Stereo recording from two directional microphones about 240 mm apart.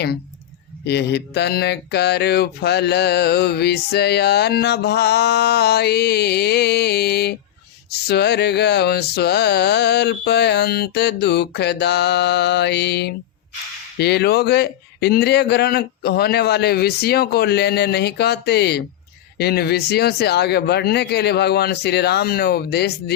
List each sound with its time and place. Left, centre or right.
0.9 s speech: left